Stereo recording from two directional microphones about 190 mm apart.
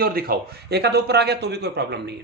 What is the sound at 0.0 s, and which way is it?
Speech, 50° right (ahead or behind).